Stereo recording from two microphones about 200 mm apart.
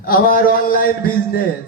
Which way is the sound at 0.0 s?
45° left (ahead or behind).